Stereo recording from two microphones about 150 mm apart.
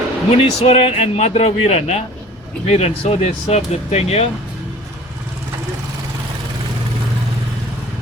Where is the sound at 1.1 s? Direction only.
45° left (ahead or behind).